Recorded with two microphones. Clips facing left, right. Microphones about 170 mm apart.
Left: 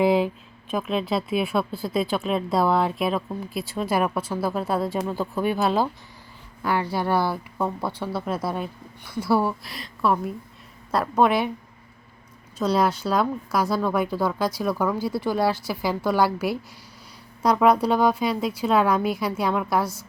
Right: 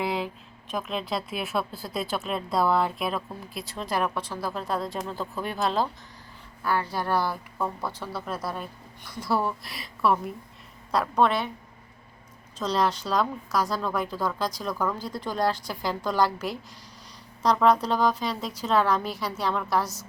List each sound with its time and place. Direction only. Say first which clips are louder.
0.7 s speech: left 5 dB; centre (ahead or behind)
6.6 s a woman's voice: left 3 dB; 15° left (ahead or behind)
7.6 s speech: left 4 dB; 25° left (ahead or behind)
9.0 s a woman's voice: left 5 dB; 5° left (ahead or behind)
12.5 s a woman's voice: left 4 dB; 10° left (ahead or behind)